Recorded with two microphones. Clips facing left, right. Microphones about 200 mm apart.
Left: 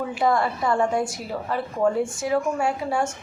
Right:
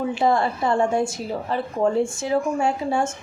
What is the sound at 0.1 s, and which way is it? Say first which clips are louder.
A woman's voice: even; 25° right (ahead or behind).